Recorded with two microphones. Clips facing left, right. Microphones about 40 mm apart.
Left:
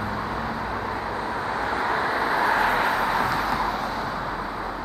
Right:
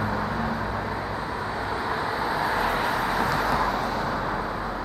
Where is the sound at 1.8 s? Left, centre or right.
Centre.